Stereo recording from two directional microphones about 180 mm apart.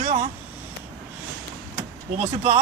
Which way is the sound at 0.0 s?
45° right (ahead or behind).